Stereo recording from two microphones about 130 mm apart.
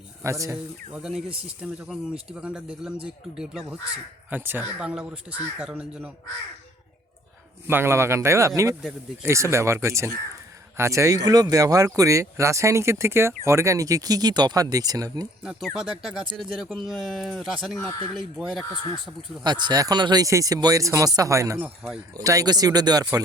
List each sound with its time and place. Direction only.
0.2 s speech: 25° right (ahead or behind)
0.5 s speech: 5° right (ahead or behind)
7.7 s speech: 20° right (ahead or behind)
15.4 s speech: 5° right (ahead or behind)
17.7 s speech: 25° left (ahead or behind)
18.1 s speech: centre (ahead or behind)
19.4 s speech: 35° right (ahead or behind)
21.6 s speech: 5° right (ahead or behind)
22.1 s speech: 25° right (ahead or behind)